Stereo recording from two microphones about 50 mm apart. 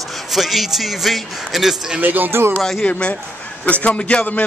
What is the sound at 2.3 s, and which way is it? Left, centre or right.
Speech, right.